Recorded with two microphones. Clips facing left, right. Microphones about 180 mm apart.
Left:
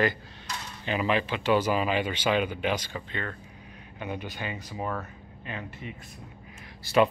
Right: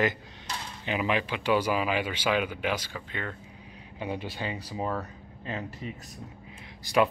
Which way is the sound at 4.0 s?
30° right (ahead or behind).